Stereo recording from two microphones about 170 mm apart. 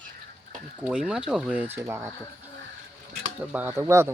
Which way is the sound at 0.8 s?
5° right (ahead or behind).